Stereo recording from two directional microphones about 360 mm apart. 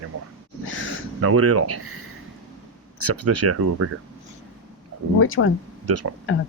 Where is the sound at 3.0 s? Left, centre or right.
Right.